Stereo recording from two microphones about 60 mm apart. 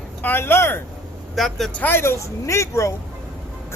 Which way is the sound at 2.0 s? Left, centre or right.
Left.